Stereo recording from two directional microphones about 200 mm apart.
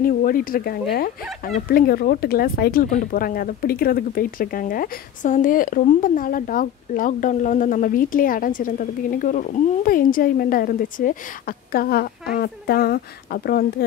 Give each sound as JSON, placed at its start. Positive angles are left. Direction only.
{"t": 0.0, "sound": "speech", "side_deg": 45}